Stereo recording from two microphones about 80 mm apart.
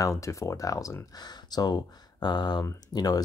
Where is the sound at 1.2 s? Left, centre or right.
Left.